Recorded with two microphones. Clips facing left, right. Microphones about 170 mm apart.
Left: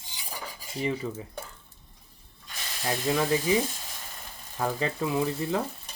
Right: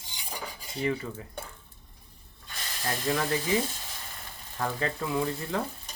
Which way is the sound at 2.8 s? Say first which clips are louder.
Left 3 dB; 15° left (ahead or behind).